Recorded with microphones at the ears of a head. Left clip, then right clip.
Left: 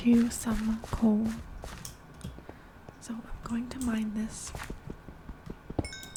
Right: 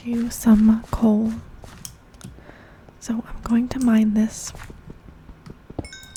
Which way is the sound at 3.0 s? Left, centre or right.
Right.